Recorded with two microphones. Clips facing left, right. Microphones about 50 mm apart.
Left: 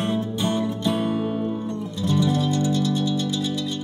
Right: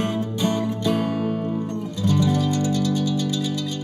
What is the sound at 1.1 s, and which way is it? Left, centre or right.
Music, right.